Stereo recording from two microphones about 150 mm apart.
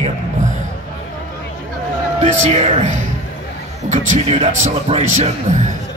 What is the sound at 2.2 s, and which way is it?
Speech, 50° right (ahead or behind).